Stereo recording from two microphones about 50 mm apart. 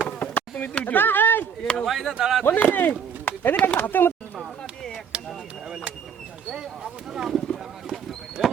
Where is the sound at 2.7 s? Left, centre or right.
Left.